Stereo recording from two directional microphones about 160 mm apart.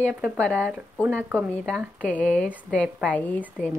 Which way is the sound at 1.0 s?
10° right (ahead or behind).